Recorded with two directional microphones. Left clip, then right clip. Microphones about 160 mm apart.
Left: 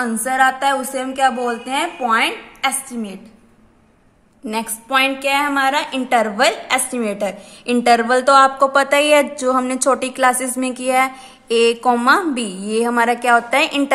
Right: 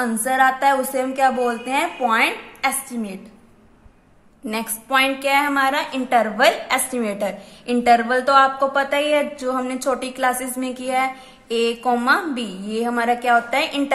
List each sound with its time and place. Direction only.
0.0 s a woman's voice: 10° left (ahead or behind)
4.5 s a woman's voice: 10° left (ahead or behind)